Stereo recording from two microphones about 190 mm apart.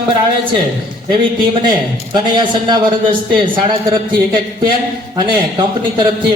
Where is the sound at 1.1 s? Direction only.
25° right (ahead or behind).